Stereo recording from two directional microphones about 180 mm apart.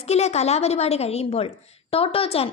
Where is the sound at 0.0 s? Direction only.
35° left (ahead or behind).